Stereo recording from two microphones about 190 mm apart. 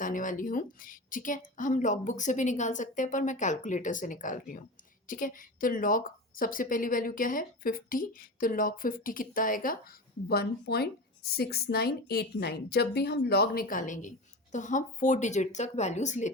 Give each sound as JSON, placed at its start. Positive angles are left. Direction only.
{"t": 0.0, "sound": "a woman's voice", "side_deg": 45}